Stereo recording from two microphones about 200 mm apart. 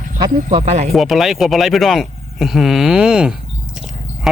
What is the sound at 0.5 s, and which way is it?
Speech, 35° right (ahead or behind).